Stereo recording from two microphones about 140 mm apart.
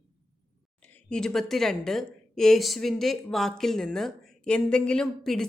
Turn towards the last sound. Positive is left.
turn(degrees=5)  # may be behind; listen again after turning